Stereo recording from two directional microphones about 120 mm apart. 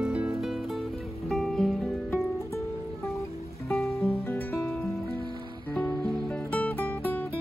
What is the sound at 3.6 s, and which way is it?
Music, centre (ahead or behind).